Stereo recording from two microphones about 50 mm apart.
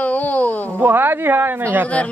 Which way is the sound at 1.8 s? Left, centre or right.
Left.